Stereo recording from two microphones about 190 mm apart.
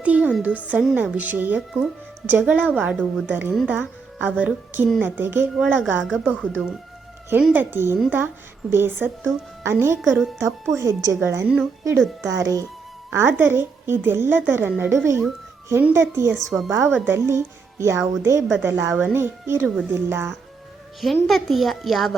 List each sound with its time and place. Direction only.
0.0 s a sound: 5° right (ahead or behind)
0.6 s speech: 5° right (ahead or behind)
10.0 s a child's voice: centre (ahead or behind)
10.8 s speech: 15° right (ahead or behind)
12.3 s speech: 15° right (ahead or behind)
21.0 s a child's voice: centre (ahead or behind)